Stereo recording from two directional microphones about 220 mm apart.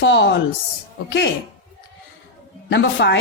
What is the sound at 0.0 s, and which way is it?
Speech, 55° left (ahead or behind).